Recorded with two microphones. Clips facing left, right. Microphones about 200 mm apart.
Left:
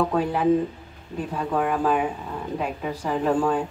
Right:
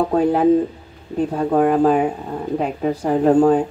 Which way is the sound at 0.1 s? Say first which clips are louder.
Right 6 dB; 45° right (ahead or behind).